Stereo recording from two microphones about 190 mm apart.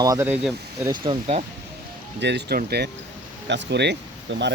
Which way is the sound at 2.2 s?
65° right (ahead or behind).